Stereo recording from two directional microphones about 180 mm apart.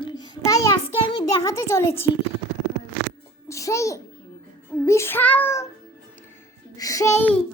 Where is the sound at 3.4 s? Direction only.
15° left (ahead or behind).